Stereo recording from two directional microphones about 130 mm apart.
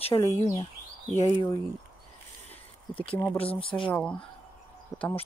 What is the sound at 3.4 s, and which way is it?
Speech, 45° left (ahead or behind).